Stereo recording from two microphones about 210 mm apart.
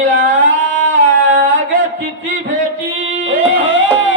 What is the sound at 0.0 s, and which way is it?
Music, 65° right (ahead or behind).